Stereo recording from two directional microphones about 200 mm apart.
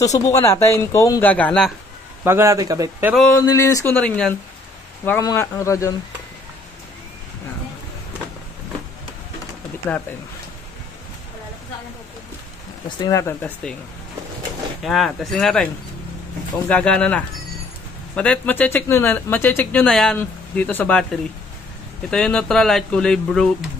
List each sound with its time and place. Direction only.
0.0 s speech: 15° left (ahead or behind)
2.2 s speech: 15° right (ahead or behind)
3.4 s speech: 15° left (ahead or behind)
13.0 s speech: 15° left (ahead or behind)
14.8 s speech: centre (ahead or behind)